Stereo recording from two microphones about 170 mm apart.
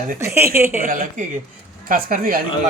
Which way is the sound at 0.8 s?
55° right (ahead or behind).